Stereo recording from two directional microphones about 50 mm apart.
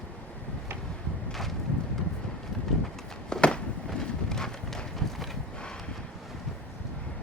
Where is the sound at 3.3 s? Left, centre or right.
Centre.